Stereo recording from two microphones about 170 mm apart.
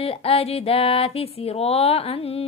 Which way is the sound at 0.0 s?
35° left (ahead or behind).